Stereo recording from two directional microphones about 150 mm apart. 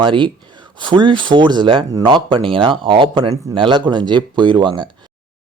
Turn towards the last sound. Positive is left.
turn(degrees=-30)  # may be behind; listen again after turning